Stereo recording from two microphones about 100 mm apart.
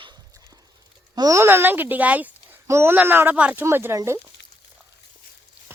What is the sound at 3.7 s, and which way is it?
Speech, 25° right (ahead or behind).